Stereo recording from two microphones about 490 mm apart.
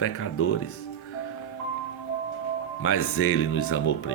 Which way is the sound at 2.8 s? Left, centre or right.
Left.